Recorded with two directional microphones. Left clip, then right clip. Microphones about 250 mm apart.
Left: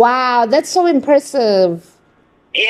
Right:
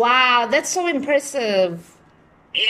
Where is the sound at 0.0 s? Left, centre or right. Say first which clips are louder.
Left 4 dB; left.